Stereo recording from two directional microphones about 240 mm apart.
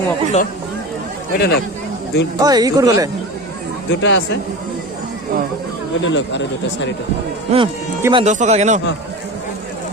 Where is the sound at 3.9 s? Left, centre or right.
Left.